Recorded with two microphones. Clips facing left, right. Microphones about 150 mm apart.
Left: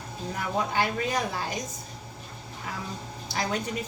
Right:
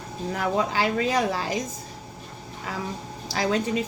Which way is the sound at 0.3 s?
90° right.